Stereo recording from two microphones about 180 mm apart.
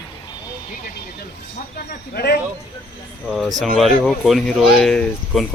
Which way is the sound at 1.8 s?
60° left (ahead or behind).